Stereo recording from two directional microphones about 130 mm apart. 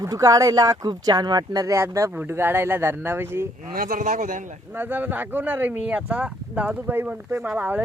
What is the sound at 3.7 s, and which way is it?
Speech, 90° right.